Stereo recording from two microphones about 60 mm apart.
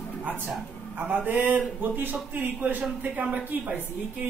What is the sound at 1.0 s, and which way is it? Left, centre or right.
Speech, right.